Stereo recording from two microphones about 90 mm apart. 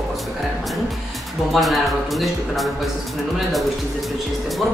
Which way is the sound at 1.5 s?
Centre (ahead or behind).